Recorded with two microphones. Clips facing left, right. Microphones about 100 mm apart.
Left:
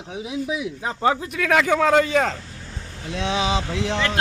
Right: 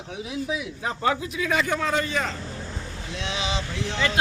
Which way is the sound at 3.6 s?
90° left.